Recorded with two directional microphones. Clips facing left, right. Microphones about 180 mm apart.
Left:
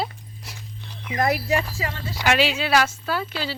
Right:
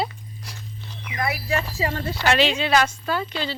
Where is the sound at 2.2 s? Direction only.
10° left (ahead or behind).